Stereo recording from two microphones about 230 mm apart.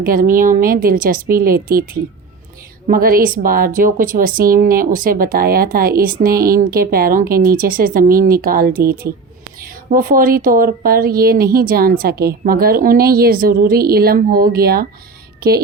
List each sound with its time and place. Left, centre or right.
0.0 s a woman's voice: right